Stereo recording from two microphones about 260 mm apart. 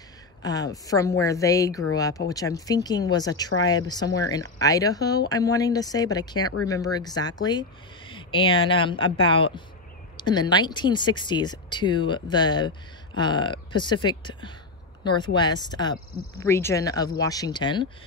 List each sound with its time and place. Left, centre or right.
0.4 s speech: centre